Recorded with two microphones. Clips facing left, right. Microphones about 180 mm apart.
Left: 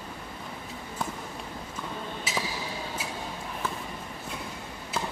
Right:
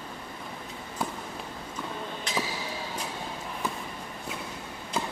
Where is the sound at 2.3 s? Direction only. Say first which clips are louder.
Right 2 dB; 5° left (ahead or behind).